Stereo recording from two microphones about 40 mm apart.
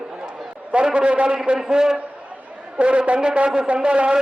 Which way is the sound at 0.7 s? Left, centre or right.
Right.